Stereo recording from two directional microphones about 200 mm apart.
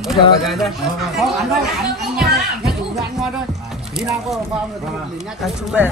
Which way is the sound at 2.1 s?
Centre (ahead or behind).